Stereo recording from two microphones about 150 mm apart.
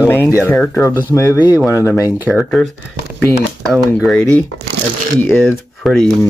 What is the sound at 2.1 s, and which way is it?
Speech, 10° right (ahead or behind).